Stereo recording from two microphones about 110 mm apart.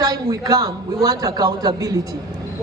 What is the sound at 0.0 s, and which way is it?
A man's voice, 35° right (ahead or behind).